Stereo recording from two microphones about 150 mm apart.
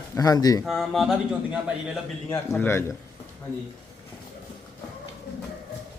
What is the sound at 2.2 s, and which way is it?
Speech, 15° left (ahead or behind).